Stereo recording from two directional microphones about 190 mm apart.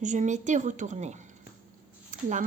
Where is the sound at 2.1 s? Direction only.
40° right (ahead or behind).